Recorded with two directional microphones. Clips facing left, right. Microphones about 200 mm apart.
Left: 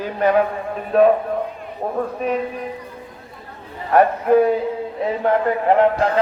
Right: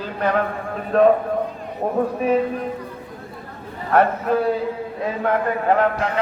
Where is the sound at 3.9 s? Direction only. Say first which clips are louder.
Left 4 dB; 15° left (ahead or behind).